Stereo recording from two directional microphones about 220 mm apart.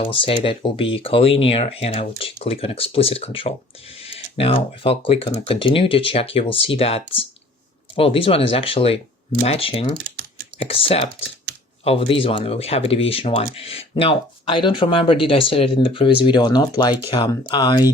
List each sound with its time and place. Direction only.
0.0 s speech: 25° left (ahead or behind)